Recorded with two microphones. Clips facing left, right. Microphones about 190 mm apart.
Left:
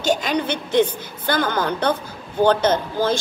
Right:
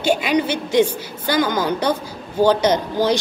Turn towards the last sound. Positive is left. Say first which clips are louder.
# right 2 dB
turn(degrees=-15)  # may be behind; listen again after turning